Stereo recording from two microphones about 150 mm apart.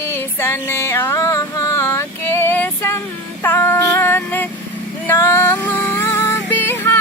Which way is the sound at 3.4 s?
15° left (ahead or behind).